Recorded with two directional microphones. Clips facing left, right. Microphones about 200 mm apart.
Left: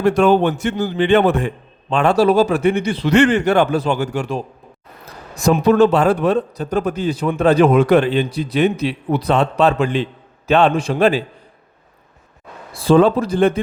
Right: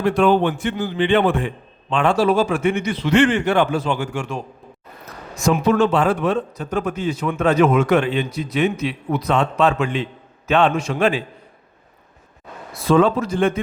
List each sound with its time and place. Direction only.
0.0 s a man's voice: 45° left (ahead or behind)
12.7 s a man's voice: 30° left (ahead or behind)